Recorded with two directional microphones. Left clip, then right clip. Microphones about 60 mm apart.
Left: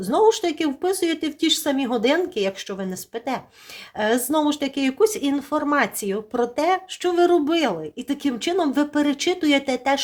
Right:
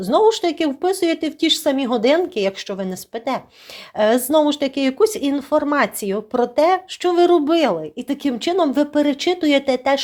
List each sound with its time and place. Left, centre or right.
0.0 s speech: centre